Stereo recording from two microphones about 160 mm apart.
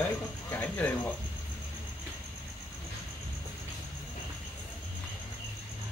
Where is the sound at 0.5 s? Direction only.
10° left (ahead or behind).